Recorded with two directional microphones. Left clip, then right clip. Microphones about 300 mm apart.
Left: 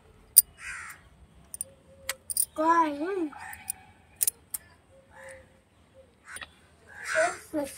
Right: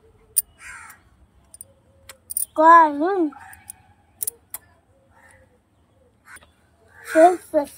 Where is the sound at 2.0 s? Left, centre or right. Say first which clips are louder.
Left 2 dB; centre.